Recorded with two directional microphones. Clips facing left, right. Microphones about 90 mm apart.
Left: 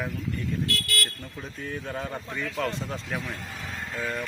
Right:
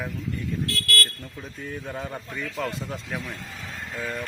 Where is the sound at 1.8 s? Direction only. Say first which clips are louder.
Even; 10° right (ahead or behind).